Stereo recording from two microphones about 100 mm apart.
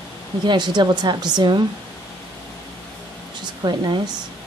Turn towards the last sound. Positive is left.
turn(degrees=-45)  # may be behind; listen again after turning